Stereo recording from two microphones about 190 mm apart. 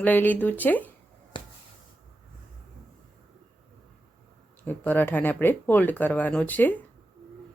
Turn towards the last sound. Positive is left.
turn(degrees=10)  # may be behind; listen again after turning